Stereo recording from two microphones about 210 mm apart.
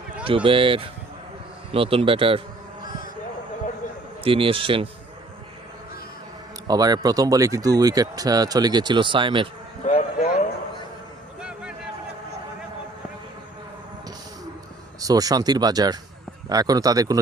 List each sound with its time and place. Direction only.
0.3 s speech: 25° right (ahead or behind)
4.2 s speech: 25° right (ahead or behind)
6.7 s speech: 20° right (ahead or behind)
9.8 s a sound: 35° left (ahead or behind)
11.3 s a sound: 5° right (ahead or behind)
15.0 s speech: 15° right (ahead or behind)